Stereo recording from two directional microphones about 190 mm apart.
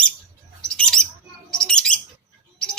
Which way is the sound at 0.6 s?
5° left (ahead or behind).